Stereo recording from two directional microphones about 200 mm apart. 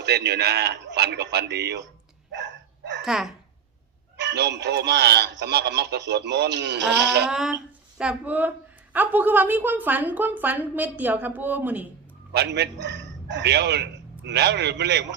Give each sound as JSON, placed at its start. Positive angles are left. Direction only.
{"t": 0.0, "sound": "a man's voice", "side_deg": -55}
{"t": 3.0, "sound": "speech", "side_deg": -5}
{"t": 4.2, "sound": "a man's voice", "side_deg": -60}
{"t": 7.3, "sound": "speech", "side_deg": -5}
{"t": 12.3, "sound": "a man's voice", "side_deg": -55}